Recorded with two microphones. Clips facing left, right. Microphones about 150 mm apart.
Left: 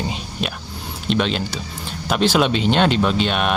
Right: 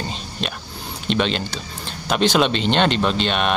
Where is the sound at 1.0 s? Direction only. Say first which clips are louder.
Left 1 dB; centre (ahead or behind).